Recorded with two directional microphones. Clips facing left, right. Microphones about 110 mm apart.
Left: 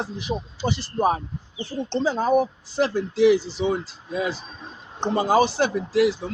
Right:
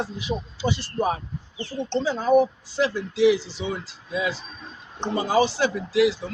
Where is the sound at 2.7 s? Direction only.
45° left (ahead or behind).